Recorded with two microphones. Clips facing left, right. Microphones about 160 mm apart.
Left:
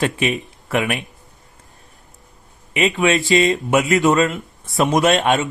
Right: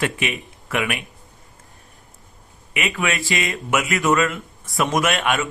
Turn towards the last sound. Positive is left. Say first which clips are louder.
# left 5 dB
turn(degrees=25)  # may be behind; listen again after turning